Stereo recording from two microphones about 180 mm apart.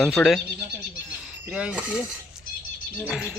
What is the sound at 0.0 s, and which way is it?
Speech, centre (ahead or behind).